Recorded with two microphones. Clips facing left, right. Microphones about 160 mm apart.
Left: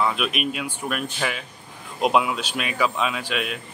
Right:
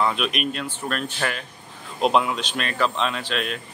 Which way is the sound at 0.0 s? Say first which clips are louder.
Even; 5° left (ahead or behind).